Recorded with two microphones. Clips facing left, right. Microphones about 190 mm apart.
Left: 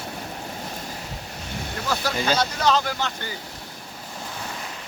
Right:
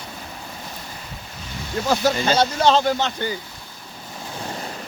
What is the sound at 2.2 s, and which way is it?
Speech, 30° right (ahead or behind).